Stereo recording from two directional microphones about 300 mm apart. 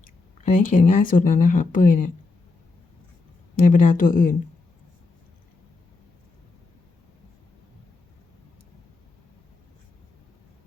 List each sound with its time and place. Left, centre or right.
0.4 s speech: left
3.5 s speech: left